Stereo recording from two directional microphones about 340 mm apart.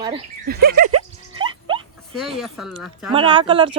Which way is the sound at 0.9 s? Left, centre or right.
Centre.